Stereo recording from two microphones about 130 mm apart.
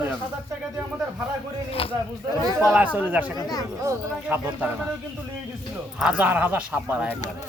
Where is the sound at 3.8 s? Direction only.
15° right (ahead or behind).